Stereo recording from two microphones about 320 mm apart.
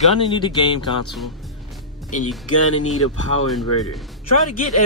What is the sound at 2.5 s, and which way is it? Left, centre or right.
Speech, left.